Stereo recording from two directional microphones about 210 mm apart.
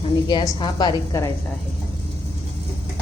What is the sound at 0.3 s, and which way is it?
A woman's voice, 20° left (ahead or behind).